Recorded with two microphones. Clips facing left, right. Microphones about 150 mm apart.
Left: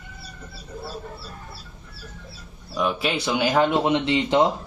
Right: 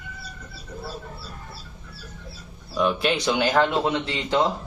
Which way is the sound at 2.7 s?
5° left (ahead or behind).